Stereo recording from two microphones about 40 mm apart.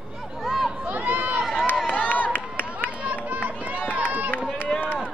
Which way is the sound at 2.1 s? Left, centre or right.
Left.